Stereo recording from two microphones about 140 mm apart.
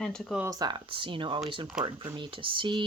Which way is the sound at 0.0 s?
5° left (ahead or behind).